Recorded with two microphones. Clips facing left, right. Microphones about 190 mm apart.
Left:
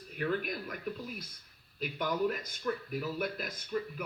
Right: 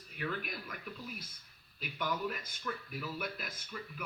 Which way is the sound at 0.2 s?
45° left (ahead or behind).